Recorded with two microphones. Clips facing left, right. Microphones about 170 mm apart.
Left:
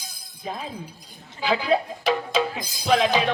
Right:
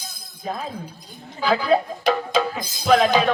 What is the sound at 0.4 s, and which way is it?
Speech, 40° right (ahead or behind).